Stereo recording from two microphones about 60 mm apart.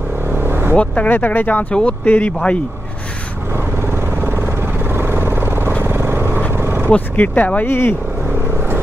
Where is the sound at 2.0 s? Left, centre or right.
Left.